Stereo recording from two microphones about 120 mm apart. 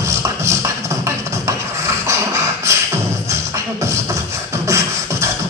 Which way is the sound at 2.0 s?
25° right (ahead or behind).